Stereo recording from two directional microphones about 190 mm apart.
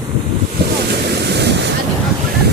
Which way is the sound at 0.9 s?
60° right (ahead or behind).